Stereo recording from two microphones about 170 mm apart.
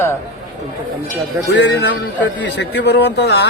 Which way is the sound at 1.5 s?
90° left.